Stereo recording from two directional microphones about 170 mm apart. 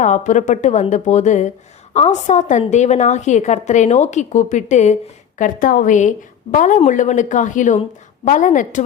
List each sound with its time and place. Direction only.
0.0 s speech: 45° left (ahead or behind)